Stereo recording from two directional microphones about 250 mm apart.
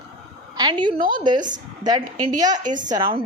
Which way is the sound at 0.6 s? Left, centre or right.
Centre.